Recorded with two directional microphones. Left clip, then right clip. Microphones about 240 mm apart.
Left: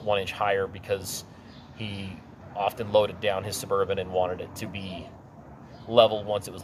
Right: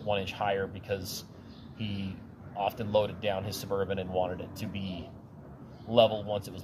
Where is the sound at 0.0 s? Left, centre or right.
Centre.